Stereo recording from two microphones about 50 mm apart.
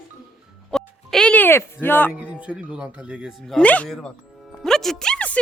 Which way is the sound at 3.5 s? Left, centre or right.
Left.